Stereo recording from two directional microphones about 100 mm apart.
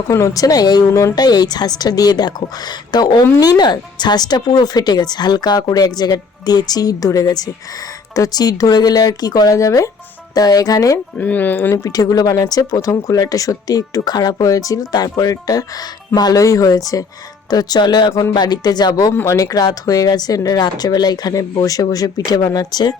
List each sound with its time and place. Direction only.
0.1 s speech: 35° left (ahead or behind)
11.2 s speech: 15° left (ahead or behind)
11.8 s speech: 40° left (ahead or behind)
19.1 s speech: 30° left (ahead or behind)